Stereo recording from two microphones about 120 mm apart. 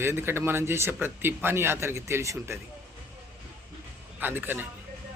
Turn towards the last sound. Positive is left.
turn(degrees=-15)  # may be behind; listen again after turning